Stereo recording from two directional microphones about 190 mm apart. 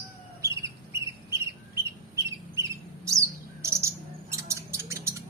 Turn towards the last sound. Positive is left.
turn(degrees=-15)  # may be behind; listen again after turning